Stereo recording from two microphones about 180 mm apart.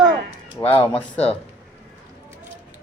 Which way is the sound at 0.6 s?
15° left (ahead or behind).